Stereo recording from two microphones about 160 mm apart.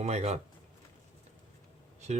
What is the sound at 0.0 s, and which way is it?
Speech, 45° right (ahead or behind).